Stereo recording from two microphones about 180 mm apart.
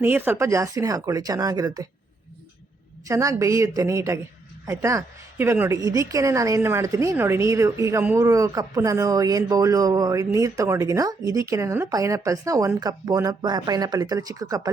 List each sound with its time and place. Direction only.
0.0 s a woman's voice: 10° right (ahead or behind)
3.1 s a woman's voice: 15° right (ahead or behind)